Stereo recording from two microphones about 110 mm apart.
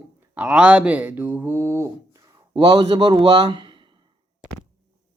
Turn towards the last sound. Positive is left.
turn(degrees=-50)  # may be behind; listen again after turning